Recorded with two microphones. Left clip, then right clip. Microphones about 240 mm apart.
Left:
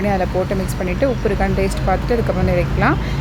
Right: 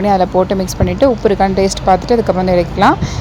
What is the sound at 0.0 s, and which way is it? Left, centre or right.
A woman's voice, right.